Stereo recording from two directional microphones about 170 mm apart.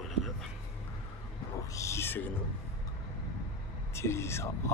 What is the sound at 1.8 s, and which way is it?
Speech, 15° left (ahead or behind).